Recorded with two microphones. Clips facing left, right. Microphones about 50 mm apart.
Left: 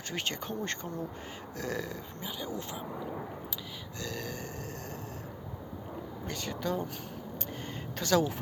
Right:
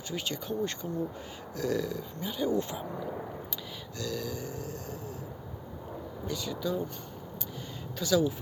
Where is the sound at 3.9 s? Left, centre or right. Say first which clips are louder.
Right 4 dB; left.